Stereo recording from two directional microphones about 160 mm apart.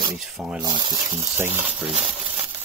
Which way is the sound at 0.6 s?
30° right (ahead or behind).